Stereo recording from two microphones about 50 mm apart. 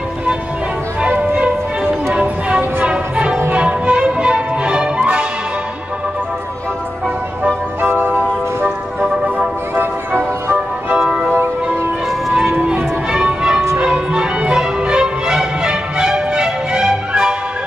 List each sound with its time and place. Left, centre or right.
1.0 s music: right
7.8 s music: right
8.6 s music: centre
9.8 s music: right
11.0 s music: centre
12.5 s music: right
13.1 s music: centre